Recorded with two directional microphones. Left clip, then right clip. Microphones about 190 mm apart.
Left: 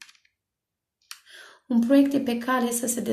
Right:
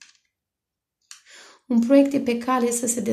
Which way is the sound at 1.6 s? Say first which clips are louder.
Right 3 dB; 35° right (ahead or behind).